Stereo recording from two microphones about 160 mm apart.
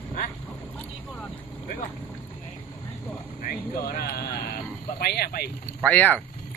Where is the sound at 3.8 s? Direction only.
75° left (ahead or behind).